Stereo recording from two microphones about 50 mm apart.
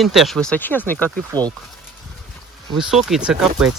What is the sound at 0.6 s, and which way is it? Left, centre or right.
Speech, left.